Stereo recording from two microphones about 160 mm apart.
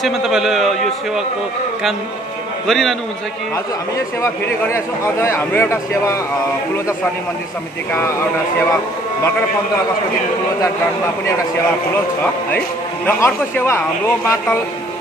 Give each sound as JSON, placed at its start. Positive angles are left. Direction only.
{"t": 0.0, "sound": "a man's voice", "side_deg": -5}
{"t": 2.6, "sound": "a man's voice", "side_deg": 0}
{"t": 4.2, "sound": "speech", "side_deg": 15}
{"t": 7.9, "sound": "speech", "side_deg": 15}
{"t": 12.2, "sound": "speech", "side_deg": 10}